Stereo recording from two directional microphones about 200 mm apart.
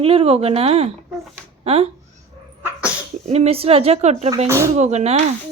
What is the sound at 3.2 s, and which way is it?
A woman's voice, 35° right (ahead or behind).